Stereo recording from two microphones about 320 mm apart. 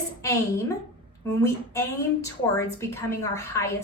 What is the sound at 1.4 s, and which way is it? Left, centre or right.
A woman's voice, centre.